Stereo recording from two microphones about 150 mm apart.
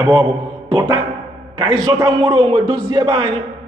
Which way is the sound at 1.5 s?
30° right (ahead or behind).